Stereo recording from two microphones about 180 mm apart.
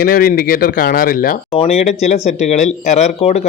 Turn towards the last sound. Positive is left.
turn(degrees=35)  # may be behind; listen again after turning